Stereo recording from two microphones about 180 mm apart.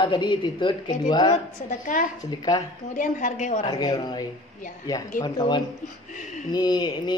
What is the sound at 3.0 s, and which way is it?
Speech, 45° left (ahead or behind).